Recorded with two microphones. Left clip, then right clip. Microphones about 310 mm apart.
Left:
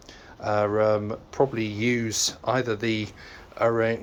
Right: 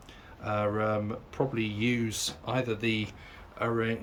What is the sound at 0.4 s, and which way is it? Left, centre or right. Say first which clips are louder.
Speech: left 7 dB; centre.